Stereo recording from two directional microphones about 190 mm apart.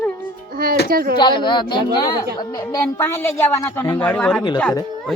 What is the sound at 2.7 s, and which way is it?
Speech, 10° left (ahead or behind).